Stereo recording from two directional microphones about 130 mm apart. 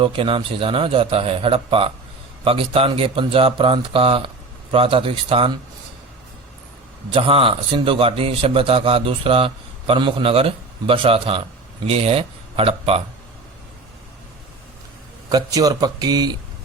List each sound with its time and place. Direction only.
0.0 s a man's voice: 45° right (ahead or behind)
7.1 s a man's voice: 45° right (ahead or behind)
15.3 s speech: 30° right (ahead or behind)